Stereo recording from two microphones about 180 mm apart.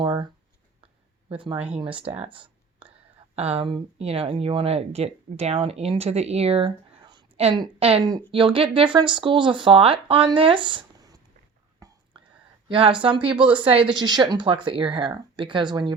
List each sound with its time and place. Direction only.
0.0 s a sound: 25° right (ahead or behind)
1.3 s speech: 30° right (ahead or behind)
1.5 s speech: 10° right (ahead or behind)
1.8 s speech: 30° right (ahead or behind)
12.1 s whispering: 30° right (ahead or behind)
12.6 s speech: 30° right (ahead or behind)